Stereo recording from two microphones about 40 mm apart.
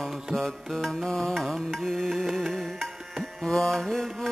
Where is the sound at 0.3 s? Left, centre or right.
Centre.